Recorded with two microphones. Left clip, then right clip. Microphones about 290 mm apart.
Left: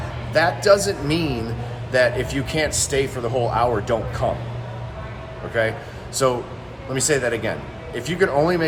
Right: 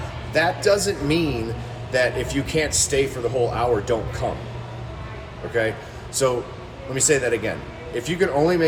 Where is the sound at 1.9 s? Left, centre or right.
Centre.